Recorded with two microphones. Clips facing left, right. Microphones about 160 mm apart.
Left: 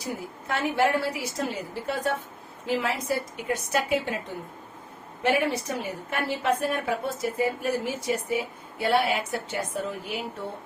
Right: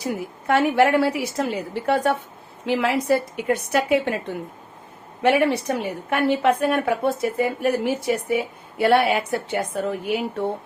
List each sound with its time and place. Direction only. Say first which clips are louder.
0.0 s a woman's voice: right 7 dB; 65° right (ahead or behind)
5.2 s a woman's voice: right 6 dB; 75° right (ahead or behind)